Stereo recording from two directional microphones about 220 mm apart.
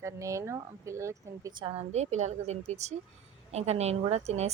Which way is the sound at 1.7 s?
30° right (ahead or behind).